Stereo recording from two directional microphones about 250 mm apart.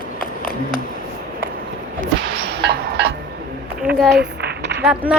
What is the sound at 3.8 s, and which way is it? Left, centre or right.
Speech, centre.